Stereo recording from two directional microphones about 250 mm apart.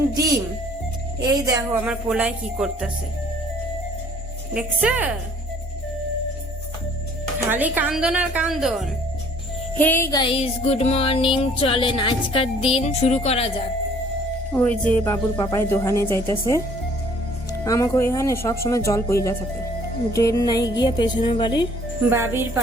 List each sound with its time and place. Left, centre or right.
1.2 s speech: centre
4.5 s speech: centre
7.5 s speech: centre
9.7 s music: centre; by 13.5 s left
14.5 s a woman's voice: centre
17.7 s a woman's voice: centre
22.1 s speech: centre